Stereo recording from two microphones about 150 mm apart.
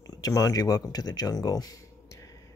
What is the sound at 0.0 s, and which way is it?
Speech, 25° left (ahead or behind).